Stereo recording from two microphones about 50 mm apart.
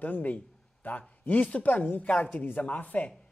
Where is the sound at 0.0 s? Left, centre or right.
Left.